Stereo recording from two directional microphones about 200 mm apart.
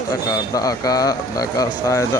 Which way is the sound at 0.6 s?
20° left (ahead or behind).